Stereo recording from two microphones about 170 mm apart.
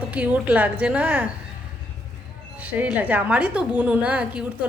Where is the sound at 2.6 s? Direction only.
10° right (ahead or behind).